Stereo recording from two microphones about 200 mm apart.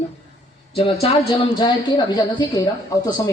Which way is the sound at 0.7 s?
30° left (ahead or behind).